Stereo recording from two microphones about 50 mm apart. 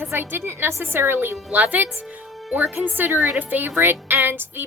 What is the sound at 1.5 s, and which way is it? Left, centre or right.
Speech, right.